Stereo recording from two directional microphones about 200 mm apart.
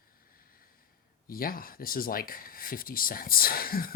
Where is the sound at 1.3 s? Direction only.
45° left (ahead or behind).